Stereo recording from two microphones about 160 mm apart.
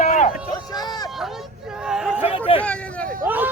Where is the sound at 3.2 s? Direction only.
10° right (ahead or behind).